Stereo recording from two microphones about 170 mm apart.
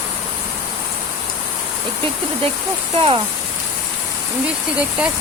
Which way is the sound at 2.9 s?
30° right (ahead or behind).